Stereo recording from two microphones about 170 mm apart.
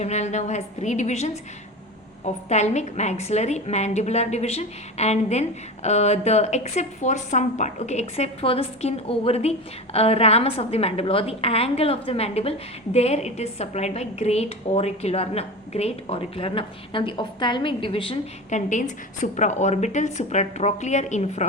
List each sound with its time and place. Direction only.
0.0 s a woman's voice: 40° left (ahead or behind)
18.7 s a woman's voice: 45° left (ahead or behind)